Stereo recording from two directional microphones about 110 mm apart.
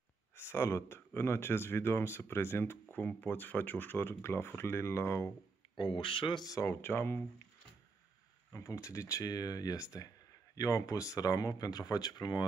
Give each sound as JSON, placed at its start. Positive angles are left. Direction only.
{"t": 0.4, "sound": "speech", "side_deg": 25}
{"t": 5.8, "sound": "speech", "side_deg": 50}
{"t": 6.4, "sound": "speech", "side_deg": 30}
{"t": 8.5, "sound": "speech", "side_deg": 30}